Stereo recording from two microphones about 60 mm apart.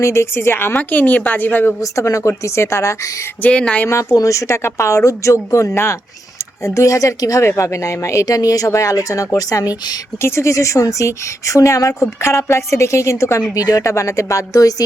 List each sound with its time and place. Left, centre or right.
0.0 s a woman's voice: left
1.8 s speech: left
3.5 s speech: centre
4.1 s speech: left
7.4 s speech: left
10.2 s speech: left
13.5 s speech: left